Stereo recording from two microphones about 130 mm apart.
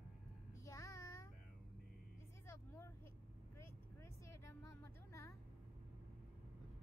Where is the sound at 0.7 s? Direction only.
25° left (ahead or behind).